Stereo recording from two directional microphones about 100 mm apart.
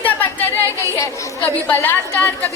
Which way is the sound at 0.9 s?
30° left (ahead or behind).